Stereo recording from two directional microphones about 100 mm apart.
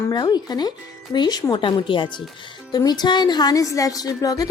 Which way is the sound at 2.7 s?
45° left (ahead or behind).